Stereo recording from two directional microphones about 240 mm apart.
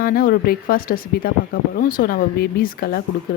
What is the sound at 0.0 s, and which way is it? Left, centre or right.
Speech, left.